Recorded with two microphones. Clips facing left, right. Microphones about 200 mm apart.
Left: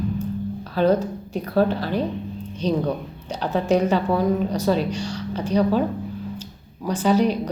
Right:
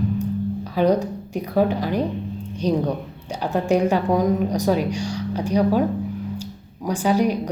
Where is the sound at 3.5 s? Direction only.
15° right (ahead or behind).